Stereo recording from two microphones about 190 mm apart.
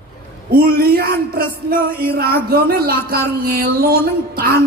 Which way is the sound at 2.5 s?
50° right (ahead or behind).